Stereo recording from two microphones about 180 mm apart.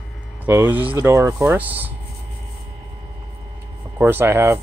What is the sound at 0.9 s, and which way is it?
Speech, 15° right (ahead or behind).